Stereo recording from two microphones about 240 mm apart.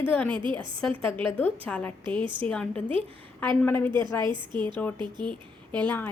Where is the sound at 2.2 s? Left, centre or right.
Centre.